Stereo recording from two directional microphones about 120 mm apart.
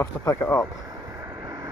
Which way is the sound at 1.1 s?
25° right (ahead or behind).